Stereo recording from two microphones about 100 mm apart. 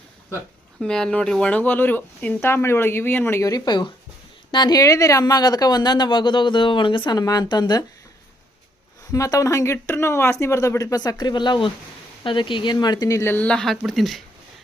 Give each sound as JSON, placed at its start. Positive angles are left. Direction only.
{"t": 0.8, "sound": "speech", "side_deg": 5}
{"t": 3.5, "sound": "speech", "side_deg": 50}
{"t": 9.1, "sound": "speech", "side_deg": 30}
{"t": 13.2, "sound": "speech", "side_deg": 15}